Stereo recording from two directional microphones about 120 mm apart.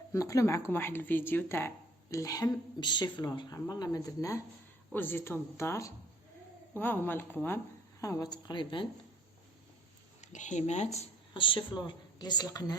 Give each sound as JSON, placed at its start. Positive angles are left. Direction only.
{"t": 0.1, "sound": "a woman's voice", "side_deg": 25}
{"t": 8.0, "sound": "speech", "side_deg": 30}
{"t": 10.2, "sound": "speech", "side_deg": 85}
{"t": 11.3, "sound": "speech", "side_deg": 45}